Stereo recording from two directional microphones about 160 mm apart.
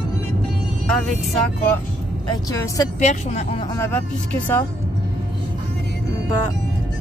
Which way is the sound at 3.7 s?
10° left (ahead or behind).